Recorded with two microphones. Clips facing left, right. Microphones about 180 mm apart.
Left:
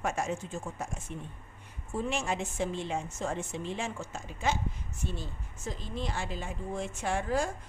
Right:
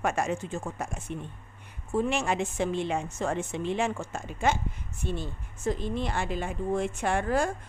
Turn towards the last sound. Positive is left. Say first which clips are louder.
# right 4 dB
turn(degrees=-60)  # may be behind; listen again after turning